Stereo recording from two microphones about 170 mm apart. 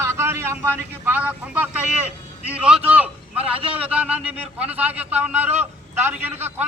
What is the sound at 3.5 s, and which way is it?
Speech, 35° right (ahead or behind).